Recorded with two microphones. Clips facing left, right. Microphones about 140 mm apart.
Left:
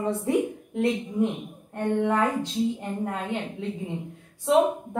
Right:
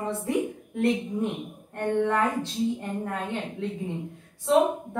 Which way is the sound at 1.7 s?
15° left (ahead or behind).